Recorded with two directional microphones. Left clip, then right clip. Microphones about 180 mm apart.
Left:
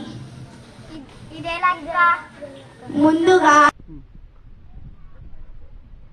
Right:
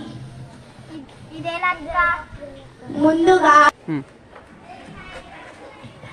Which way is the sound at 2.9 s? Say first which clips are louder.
Even; 55° left (ahead or behind).